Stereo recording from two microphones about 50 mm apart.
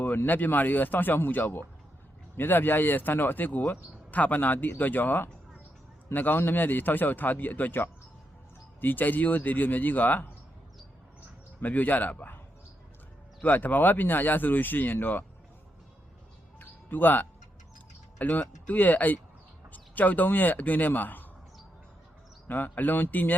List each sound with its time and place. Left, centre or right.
0.3 s speech: left
11.6 s speech: left
13.4 s speech: left
16.6 s music: left
18.2 s speech: left
22.4 s speech: left